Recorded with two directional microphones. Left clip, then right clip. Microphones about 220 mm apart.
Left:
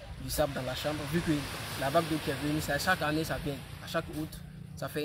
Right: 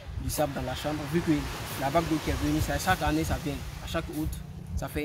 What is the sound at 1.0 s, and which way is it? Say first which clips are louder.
Speech: right 4 dB; 45° left (ahead or behind).